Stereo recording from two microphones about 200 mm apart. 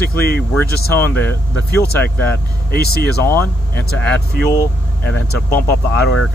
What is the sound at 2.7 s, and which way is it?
Speech, 50° left (ahead or behind).